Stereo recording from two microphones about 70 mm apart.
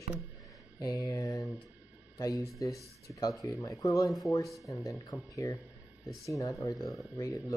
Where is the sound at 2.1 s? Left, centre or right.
Left.